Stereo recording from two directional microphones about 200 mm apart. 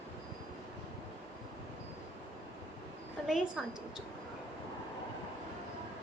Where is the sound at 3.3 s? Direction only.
Centre (ahead or behind).